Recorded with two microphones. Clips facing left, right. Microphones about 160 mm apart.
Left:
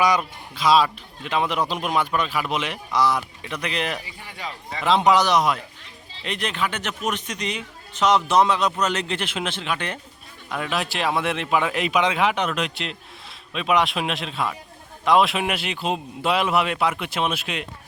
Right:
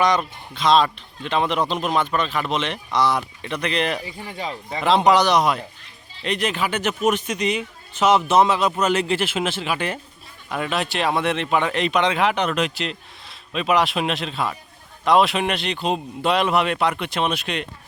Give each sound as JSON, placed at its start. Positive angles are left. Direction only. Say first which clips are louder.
{"t": 0.0, "sound": "a man's voice", "louder": "right 1 dB", "side_deg": 5}
{"t": 4.0, "sound": "speech", "louder": "right 5 dB", "side_deg": -25}
{"t": 4.8, "sound": "a man's voice", "louder": "right 2 dB", "side_deg": 0}